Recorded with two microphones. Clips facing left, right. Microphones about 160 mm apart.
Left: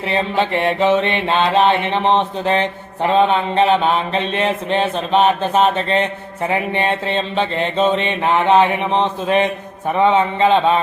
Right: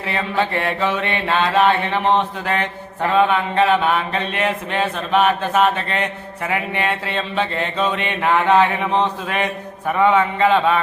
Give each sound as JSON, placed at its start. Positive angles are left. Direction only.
{"t": 0.1, "sound": "mantra", "side_deg": 25}